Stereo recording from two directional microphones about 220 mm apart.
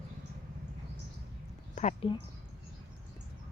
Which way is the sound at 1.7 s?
30° left (ahead or behind).